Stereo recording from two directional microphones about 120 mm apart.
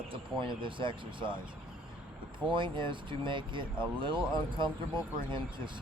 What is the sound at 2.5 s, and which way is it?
Speech, 40° right (ahead or behind).